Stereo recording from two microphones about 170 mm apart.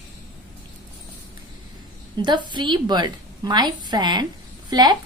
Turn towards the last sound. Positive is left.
turn(degrees=-25)  # may be behind; listen again after turning